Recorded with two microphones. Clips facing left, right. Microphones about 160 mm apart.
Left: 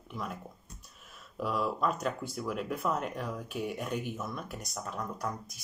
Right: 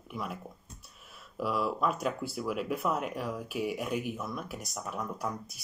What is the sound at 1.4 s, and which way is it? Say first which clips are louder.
Speech: right 1 dB; 5° right (ahead or behind).